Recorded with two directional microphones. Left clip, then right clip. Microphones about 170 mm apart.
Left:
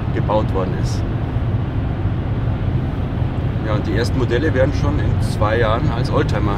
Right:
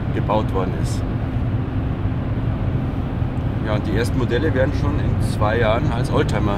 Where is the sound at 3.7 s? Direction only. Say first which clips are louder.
Left 1 dB; centre (ahead or behind).